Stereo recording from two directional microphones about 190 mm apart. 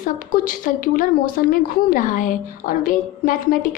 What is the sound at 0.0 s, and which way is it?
A woman's voice, 45° left (ahead or behind).